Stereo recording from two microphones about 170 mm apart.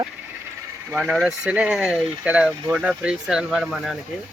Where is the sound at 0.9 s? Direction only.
5° right (ahead or behind).